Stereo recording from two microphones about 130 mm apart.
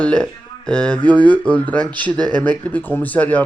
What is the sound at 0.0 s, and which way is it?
Speech, 5° left (ahead or behind).